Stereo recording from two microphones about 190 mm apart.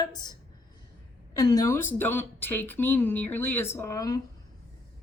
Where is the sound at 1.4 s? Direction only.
20° left (ahead or behind).